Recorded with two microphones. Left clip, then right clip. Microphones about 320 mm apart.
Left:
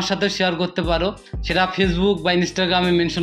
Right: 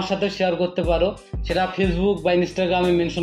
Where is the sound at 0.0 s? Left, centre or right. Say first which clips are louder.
Left 2 dB; left.